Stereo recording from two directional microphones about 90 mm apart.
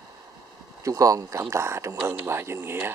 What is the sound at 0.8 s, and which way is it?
Speech, 40° right (ahead or behind).